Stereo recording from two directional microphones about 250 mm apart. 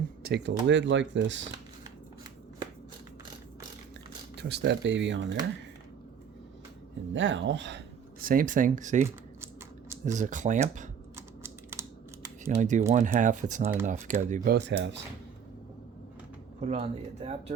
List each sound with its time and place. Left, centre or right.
0.2 s speech: right
4.4 s speech: right
7.1 s speech: right
8.2 s speech: right
10.1 s speech: right
11.4 s computer keyboard: centre
12.5 s speech: right
16.6 s speech: right